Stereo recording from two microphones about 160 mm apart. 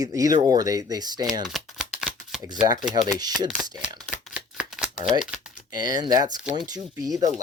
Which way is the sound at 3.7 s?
5° right (ahead or behind).